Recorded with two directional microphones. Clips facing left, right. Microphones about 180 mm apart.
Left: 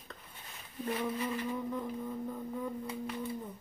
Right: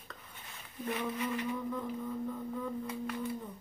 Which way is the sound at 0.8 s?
15° left (ahead or behind).